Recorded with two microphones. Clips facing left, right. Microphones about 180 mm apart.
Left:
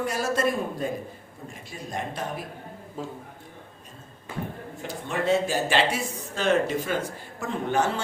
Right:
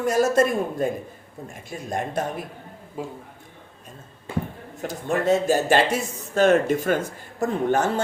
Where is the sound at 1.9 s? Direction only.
50° right (ahead or behind).